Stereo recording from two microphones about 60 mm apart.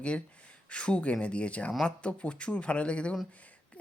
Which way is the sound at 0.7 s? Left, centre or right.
Centre.